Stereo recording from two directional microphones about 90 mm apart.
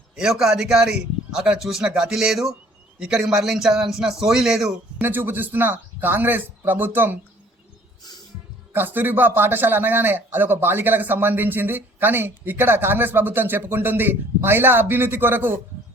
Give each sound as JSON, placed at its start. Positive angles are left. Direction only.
{"t": 0.2, "sound": "a man's voice", "side_deg": -5}
{"t": 4.9, "sound": "speech", "side_deg": -20}
{"t": 8.7, "sound": "speech", "side_deg": -20}